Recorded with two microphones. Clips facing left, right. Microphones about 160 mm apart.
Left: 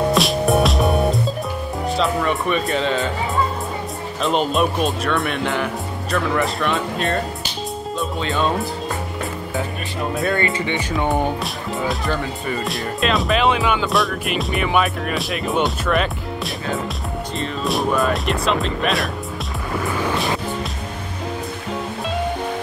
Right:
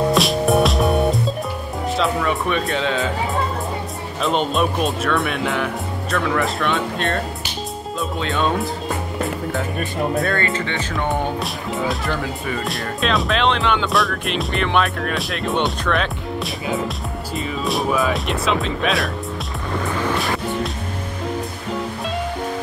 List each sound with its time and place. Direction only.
0.1 s music: centre (ahead or behind)
2.0 s speech: centre (ahead or behind)
4.2 s speech: centre (ahead or behind)
10.3 s speech: 15° left (ahead or behind)
11.4 s speech: centre (ahead or behind)
17.4 s speech: centre (ahead or behind)